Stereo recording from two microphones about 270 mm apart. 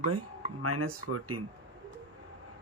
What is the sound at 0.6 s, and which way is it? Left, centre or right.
Speech, right.